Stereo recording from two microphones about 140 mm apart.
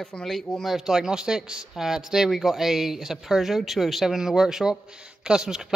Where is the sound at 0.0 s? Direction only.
5° left (ahead or behind).